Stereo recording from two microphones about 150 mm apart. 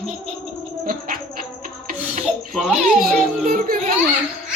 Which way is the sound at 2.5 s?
Centre (ahead or behind).